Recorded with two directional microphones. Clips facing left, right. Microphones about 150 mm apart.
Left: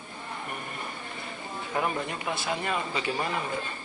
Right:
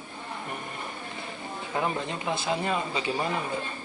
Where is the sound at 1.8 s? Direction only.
25° right (ahead or behind).